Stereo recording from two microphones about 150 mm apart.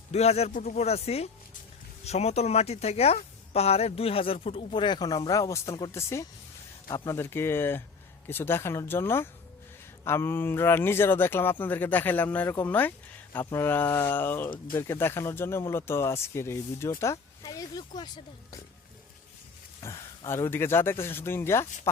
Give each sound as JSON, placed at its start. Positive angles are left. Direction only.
{"t": 0.1, "sound": "speech", "side_deg": 45}
{"t": 19.8, "sound": "speech", "side_deg": 20}